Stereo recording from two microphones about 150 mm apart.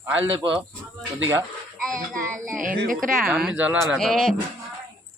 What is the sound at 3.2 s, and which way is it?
Speech, 5° right (ahead or behind).